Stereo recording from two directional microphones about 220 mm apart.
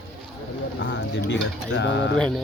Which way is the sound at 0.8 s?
55° left (ahead or behind).